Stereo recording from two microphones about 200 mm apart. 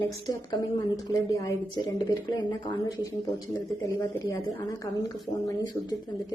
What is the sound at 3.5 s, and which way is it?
Speech, 20° left (ahead or behind).